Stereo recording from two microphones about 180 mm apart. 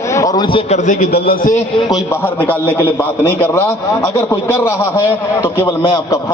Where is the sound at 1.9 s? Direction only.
15° left (ahead or behind).